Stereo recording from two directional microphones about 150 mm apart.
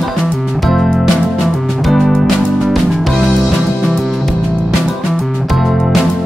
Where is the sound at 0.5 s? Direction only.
Centre (ahead or behind).